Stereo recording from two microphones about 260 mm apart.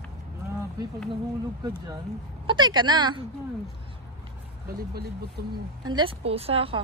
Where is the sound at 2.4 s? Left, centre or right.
Centre.